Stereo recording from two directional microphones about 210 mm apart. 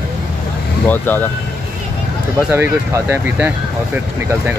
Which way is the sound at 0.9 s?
10° left (ahead or behind).